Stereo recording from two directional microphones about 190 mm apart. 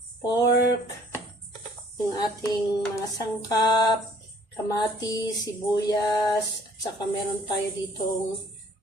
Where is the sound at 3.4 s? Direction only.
20° left (ahead or behind).